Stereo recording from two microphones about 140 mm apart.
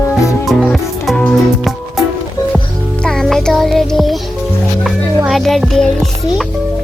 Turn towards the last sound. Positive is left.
turn(degrees=0)  # may be behind; listen again after turning